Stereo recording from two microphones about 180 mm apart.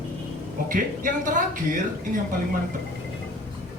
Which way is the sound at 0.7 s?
50° right (ahead or behind).